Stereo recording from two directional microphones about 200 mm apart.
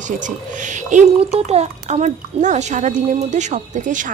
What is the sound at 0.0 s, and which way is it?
Speech, 40° right (ahead or behind).